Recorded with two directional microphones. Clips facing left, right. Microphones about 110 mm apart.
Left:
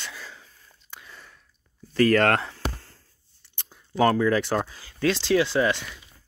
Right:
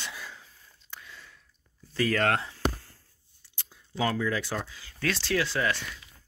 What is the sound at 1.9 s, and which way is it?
Speech, 65° left (ahead or behind).